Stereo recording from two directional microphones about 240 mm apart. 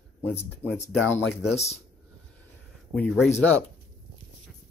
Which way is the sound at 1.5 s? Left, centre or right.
Left.